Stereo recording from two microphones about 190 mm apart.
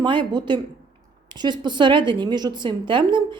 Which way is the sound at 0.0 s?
25° right (ahead or behind).